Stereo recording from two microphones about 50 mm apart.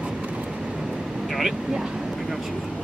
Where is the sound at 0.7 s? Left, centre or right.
Centre.